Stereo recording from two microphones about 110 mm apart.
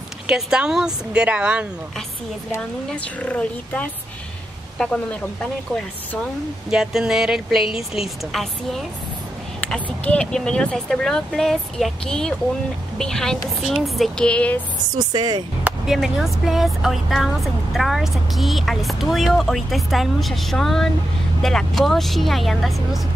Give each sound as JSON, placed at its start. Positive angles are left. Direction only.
{"t": 0.3, "sound": "speech", "side_deg": -5}
{"t": 2.9, "sound": "speech", "side_deg": 10}
{"t": 6.7, "sound": "speech", "side_deg": -5}
{"t": 9.8, "sound": "speech", "side_deg": 10}
{"t": 15.0, "sound": "speech", "side_deg": -40}
{"t": 15.9, "sound": "speech", "side_deg": -5}